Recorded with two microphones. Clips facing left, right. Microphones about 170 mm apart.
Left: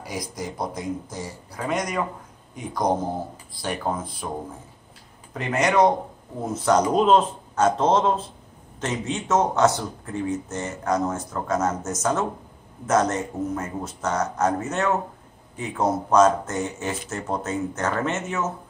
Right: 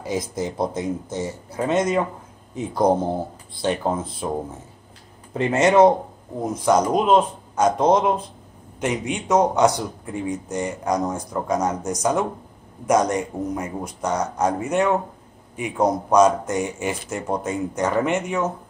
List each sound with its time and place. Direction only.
0.0 s speech: 25° right (ahead or behind)
5.3 s speech: 25° right (ahead or behind)
6.5 s speech: 10° right (ahead or behind)